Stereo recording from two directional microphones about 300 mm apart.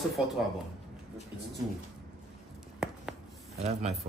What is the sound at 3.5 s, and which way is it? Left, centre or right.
Speech, right.